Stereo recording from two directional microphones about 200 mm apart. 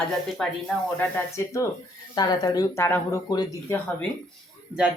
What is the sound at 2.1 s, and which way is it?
Speech, 20° left (ahead or behind).